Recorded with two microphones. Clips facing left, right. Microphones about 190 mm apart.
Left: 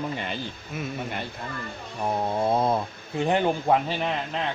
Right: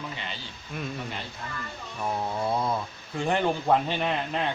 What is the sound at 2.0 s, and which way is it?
Speech, 25° left (ahead or behind).